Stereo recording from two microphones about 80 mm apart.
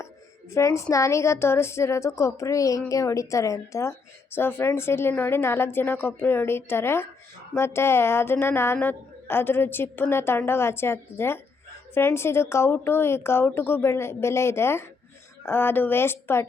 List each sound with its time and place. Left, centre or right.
0.5 s a woman's voice: left
4.4 s a woman's voice: left